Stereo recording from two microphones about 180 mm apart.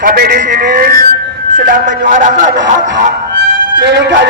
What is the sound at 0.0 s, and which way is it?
Music, 55° right (ahead or behind).